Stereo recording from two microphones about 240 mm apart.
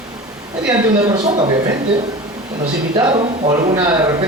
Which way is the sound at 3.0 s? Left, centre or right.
Centre.